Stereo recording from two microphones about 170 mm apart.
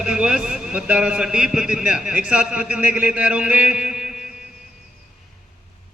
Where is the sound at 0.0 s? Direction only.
5° right (ahead or behind).